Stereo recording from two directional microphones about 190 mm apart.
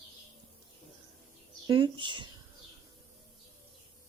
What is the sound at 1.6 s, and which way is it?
Speech, 25° right (ahead or behind).